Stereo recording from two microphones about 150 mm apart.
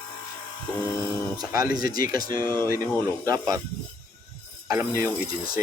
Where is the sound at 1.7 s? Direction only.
75° left (ahead or behind).